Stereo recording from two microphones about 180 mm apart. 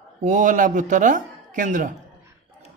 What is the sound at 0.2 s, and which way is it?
Speech, 45° right (ahead or behind).